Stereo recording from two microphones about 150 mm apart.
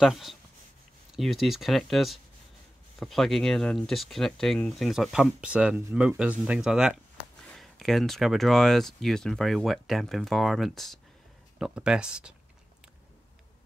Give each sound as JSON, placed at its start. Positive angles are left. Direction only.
{"t": 0.0, "sound": "speech", "side_deg": 0}